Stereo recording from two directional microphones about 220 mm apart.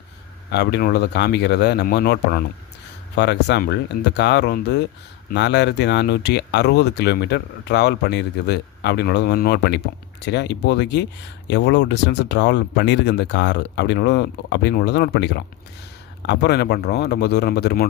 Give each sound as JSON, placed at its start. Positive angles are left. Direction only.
{"t": 0.5, "sound": "speech", "side_deg": 50}